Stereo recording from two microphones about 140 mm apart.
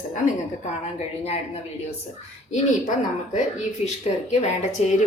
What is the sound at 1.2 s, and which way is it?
Speech, 45° left (ahead or behind).